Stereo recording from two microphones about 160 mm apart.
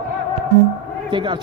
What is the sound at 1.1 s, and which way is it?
Speech, 30° right (ahead or behind).